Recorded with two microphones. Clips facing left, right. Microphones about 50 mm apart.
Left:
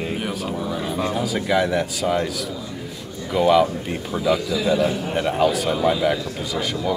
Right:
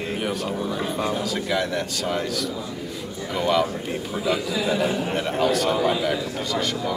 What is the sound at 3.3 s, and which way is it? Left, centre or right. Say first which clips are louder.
A man's voice: left 5 dB; centre.